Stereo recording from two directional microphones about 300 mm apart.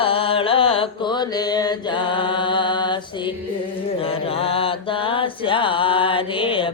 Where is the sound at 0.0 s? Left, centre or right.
Centre.